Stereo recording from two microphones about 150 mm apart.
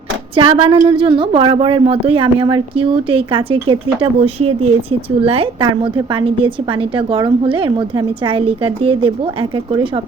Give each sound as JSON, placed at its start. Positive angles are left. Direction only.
{"t": 0.3, "sound": "a woman's voice", "side_deg": -35}